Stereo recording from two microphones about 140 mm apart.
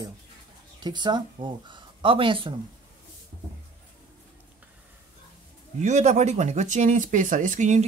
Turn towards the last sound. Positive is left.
turn(degrees=-60)  # may be behind; listen again after turning